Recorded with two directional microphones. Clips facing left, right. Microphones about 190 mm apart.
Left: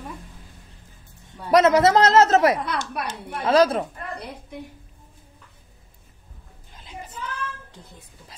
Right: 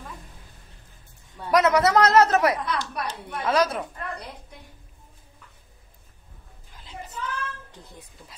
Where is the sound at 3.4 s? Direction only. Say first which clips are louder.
Left 5 dB; 30° left (ahead or behind).